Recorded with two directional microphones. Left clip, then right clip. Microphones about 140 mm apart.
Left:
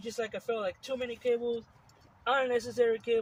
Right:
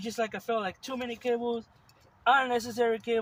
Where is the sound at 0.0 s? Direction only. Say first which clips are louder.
Right 3 dB; 45° right (ahead or behind).